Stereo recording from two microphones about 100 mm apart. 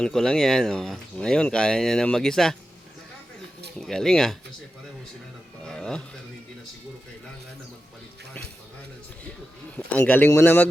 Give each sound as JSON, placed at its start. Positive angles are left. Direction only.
{"t": 0.0, "sound": "speech", "side_deg": 5}
{"t": 3.8, "sound": "speech", "side_deg": 5}
{"t": 5.6, "sound": "speech", "side_deg": 5}
{"t": 9.7, "sound": "speech", "side_deg": 15}